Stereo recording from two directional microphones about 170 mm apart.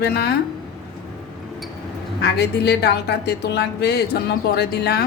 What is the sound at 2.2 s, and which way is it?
A woman's voice, 70° left (ahead or behind).